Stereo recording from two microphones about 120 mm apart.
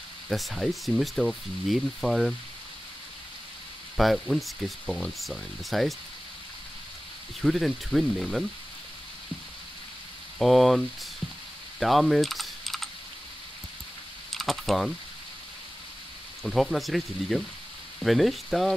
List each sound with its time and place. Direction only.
0.3 s speech: centre (ahead or behind)
3.9 s speech: centre (ahead or behind)
7.4 s speech: centre (ahead or behind)
10.4 s speech: centre (ahead or behind)
11.8 s typing: centre (ahead or behind)
14.3 s speech: centre (ahead or behind)
16.4 s speech: centre (ahead or behind)